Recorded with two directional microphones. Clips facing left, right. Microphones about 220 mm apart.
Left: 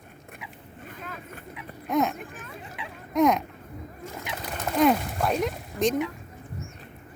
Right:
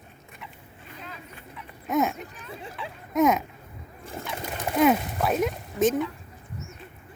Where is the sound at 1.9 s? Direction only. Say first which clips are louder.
Even; centre (ahead or behind).